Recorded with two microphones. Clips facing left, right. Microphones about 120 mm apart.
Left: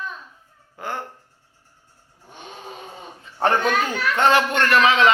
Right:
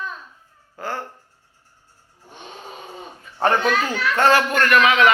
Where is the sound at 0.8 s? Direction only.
15° left (ahead or behind).